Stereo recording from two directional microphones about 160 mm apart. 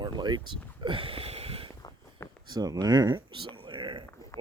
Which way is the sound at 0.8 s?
35° right (ahead or behind).